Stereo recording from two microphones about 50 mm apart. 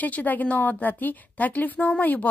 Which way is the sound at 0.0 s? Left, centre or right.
Left.